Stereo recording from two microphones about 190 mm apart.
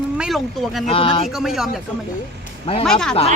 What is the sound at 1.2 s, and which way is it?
Speech, centre (ahead or behind).